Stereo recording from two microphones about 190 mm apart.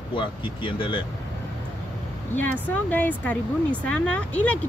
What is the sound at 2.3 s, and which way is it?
Speech, 10° left (ahead or behind).